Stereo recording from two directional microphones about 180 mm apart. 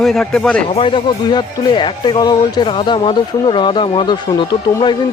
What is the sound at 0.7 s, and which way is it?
Speech, 30° left (ahead or behind).